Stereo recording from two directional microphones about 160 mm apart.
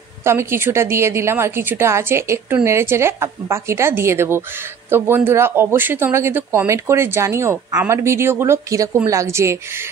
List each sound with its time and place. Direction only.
0.2 s speech: 15° right (ahead or behind)